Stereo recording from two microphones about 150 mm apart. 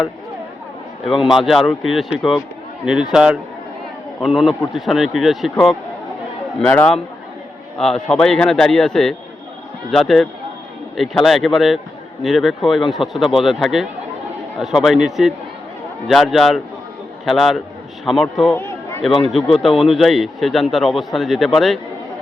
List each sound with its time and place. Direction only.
1.2 s a man's voice: centre (ahead or behind)